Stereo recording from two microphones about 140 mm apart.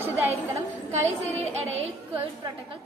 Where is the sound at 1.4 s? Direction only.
50° right (ahead or behind).